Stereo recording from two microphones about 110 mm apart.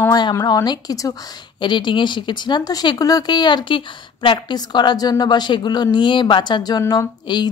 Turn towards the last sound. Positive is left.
turn(degrees=45)  # may be behind; listen again after turning